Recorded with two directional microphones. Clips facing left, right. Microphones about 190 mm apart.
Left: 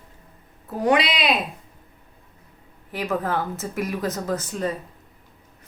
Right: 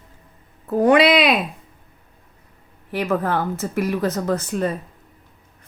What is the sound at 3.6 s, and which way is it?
Speech, 45° right (ahead or behind).